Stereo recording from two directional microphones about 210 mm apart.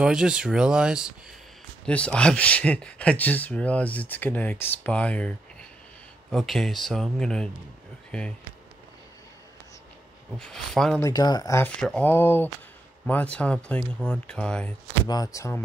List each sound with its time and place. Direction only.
0.0 s speech: 5° right (ahead or behind)
10.4 s speech: centre (ahead or behind)
11.1 s speech: 20° left (ahead or behind)
15.0 s speech: 15° left (ahead or behind)